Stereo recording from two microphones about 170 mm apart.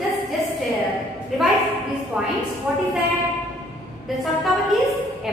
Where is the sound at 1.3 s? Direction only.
Centre (ahead or behind).